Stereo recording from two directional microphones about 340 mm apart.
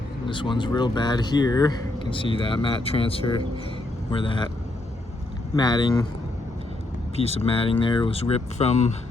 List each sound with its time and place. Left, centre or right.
0.3 s speech: centre
5.5 s speech: centre
7.2 s speech: centre